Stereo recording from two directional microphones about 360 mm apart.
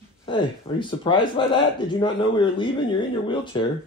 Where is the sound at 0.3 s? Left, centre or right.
Centre.